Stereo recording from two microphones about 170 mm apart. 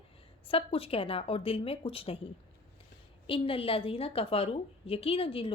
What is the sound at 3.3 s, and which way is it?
A woman's voice, 30° left (ahead or behind).